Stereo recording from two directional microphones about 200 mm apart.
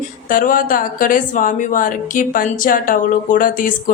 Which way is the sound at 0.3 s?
45° left (ahead or behind).